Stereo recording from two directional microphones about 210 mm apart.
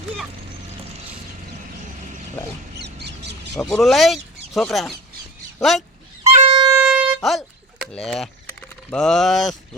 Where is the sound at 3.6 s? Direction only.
Centre (ahead or behind).